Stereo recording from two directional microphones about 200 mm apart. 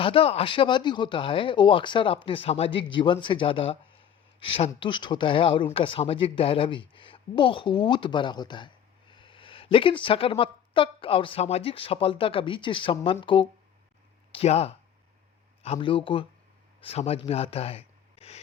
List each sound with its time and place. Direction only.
0.0 s speech: 25° left (ahead or behind)